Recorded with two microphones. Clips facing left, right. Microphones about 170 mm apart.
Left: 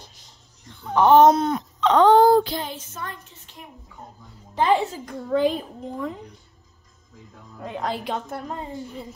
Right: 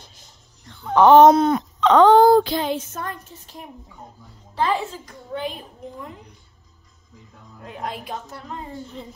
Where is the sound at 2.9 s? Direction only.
45° right (ahead or behind).